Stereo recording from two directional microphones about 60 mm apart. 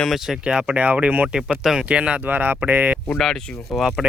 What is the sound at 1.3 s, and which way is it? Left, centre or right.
Speech, centre.